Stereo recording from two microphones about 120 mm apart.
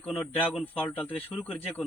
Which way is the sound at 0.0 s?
10° left (ahead or behind).